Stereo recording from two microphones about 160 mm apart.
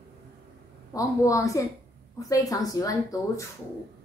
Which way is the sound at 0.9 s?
20° left (ahead or behind).